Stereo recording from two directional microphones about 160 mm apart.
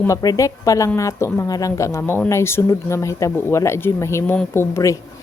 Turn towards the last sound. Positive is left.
turn(degrees=20)  # may be behind; listen again after turning